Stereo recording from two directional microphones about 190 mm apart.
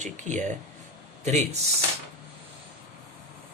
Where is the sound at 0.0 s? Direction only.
40° right (ahead or behind).